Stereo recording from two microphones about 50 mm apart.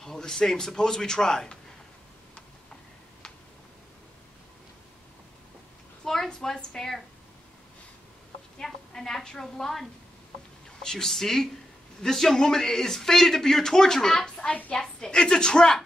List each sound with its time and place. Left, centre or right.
0.0 s a man's voice: centre
6.0 s a woman's voice: centre
8.5 s a woman's voice: centre
14.5 s a woman's voice: left
14.8 s a man's voice: centre